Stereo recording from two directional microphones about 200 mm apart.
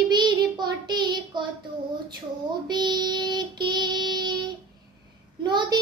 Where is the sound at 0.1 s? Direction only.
20° right (ahead or behind).